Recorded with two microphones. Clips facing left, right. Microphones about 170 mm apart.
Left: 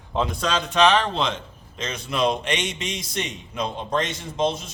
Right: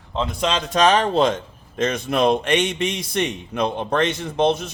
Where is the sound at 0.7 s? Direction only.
40° right (ahead or behind); by 4.7 s 60° right (ahead or behind).